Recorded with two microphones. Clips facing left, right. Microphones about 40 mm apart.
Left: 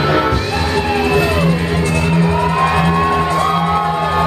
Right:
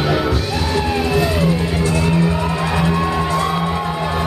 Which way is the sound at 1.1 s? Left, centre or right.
Left.